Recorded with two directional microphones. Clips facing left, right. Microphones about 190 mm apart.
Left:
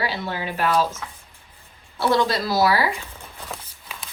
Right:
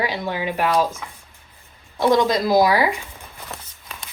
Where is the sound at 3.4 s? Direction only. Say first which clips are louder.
Left 1 dB; centre (ahead or behind).